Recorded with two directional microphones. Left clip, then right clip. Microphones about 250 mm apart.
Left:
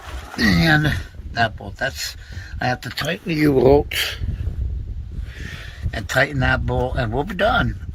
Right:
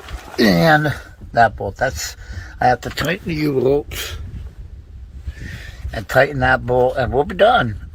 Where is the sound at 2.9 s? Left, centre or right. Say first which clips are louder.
Right 3 dB; centre.